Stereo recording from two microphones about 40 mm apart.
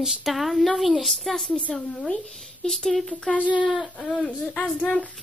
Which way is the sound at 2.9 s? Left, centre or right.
Centre.